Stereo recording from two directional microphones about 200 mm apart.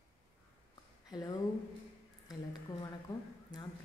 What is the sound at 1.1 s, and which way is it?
Speech, 20° left (ahead or behind).